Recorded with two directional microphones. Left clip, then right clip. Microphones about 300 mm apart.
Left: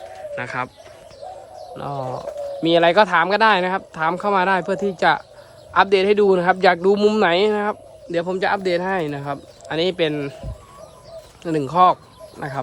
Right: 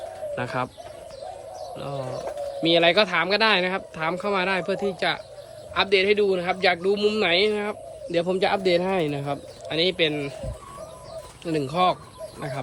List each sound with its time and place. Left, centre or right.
1.7 s a man's voice: centre
11.4 s a man's voice: centre